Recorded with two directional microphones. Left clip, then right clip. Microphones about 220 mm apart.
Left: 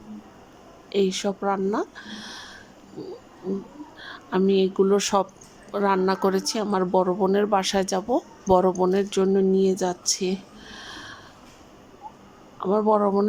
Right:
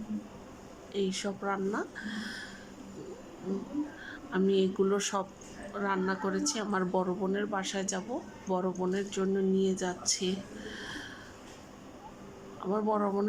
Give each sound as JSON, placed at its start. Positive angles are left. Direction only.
{"t": 0.9, "sound": "speech", "side_deg": 15}
{"t": 4.0, "sound": "speech", "side_deg": 20}
{"t": 12.5, "sound": "speech", "side_deg": 15}